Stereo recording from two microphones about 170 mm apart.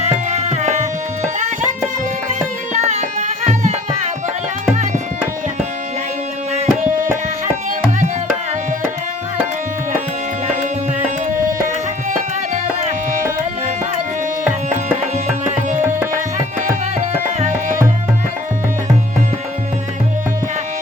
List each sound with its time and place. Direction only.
0.0 s tabla: 40° right (ahead or behind)
2.7 s music: 45° right (ahead or behind)
4.7 s tabla: 45° right (ahead or behind)
6.5 s tabla: 45° right (ahead or behind)
17.0 s tabla: 40° right (ahead or behind)